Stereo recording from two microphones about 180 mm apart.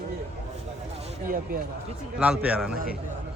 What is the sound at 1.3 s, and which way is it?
Speech, 50° right (ahead or behind).